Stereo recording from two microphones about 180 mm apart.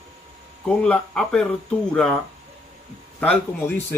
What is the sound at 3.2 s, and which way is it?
Speech, 10° left (ahead or behind).